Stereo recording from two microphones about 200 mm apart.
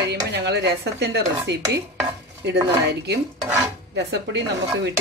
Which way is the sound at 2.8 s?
55° right (ahead or behind).